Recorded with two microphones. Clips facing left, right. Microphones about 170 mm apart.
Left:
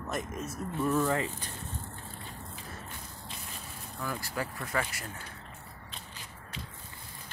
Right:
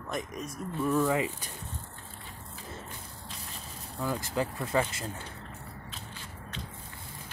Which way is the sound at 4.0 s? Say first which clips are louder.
Right 5 dB; 20° right (ahead or behind).